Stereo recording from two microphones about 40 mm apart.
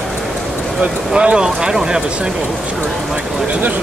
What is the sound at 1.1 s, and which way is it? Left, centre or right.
Speech, right.